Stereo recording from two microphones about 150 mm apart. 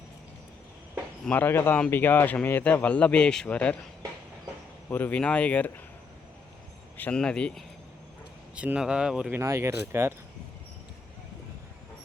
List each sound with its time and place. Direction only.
1.2 s a man's voice: 10° left (ahead or behind)
4.9 s a man's voice: 10° left (ahead or behind)
6.9 s speech: 10° left (ahead or behind)
8.5 s speech: 10° right (ahead or behind)
9.4 s speech: 20° right (ahead or behind)